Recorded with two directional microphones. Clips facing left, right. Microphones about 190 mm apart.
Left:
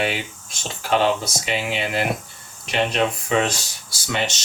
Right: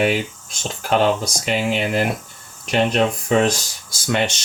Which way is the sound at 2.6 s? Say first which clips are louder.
Right 4 dB; 45° right (ahead or behind).